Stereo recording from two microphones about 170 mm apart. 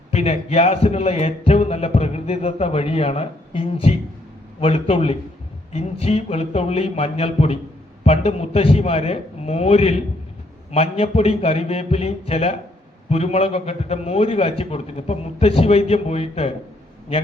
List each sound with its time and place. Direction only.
0.1 s speech: 40° left (ahead or behind)